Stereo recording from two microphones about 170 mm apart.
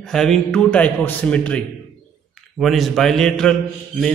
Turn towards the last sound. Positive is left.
turn(degrees=5)  # may be behind; listen again after turning